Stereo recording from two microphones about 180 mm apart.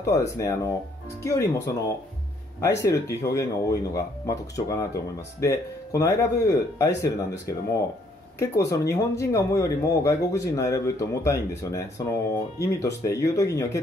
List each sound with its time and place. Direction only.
0.0 s speech: 15° left (ahead or behind)
2.8 s speech: 15° left (ahead or behind)
8.6 s speech: 15° left (ahead or behind)